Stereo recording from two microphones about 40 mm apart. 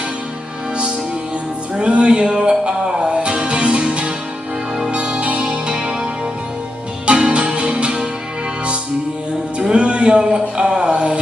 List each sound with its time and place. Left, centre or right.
1.8 s music: right
7.1 s music: right
9.6 s music: right